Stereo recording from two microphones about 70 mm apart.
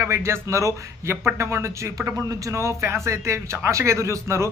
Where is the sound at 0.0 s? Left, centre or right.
Right.